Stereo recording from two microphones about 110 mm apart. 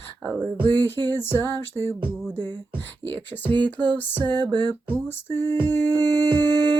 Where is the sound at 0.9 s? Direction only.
20° left (ahead or behind).